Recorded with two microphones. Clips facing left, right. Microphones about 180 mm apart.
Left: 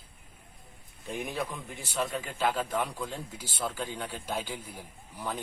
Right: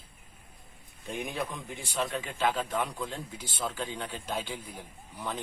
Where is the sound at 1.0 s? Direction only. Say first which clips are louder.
Even; centre (ahead or behind).